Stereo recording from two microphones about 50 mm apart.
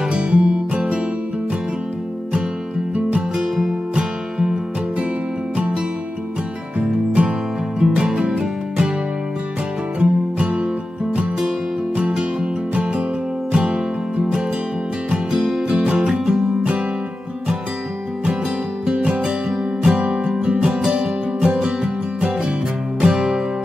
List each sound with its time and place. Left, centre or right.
0.0 s music: centre
2.9 s music: right
7.8 s music: centre
9.9 s music: right; by 15.7 s centre
15.7 s music: right
18.9 s music: right
19.5 s music: centre
20.0 s music: right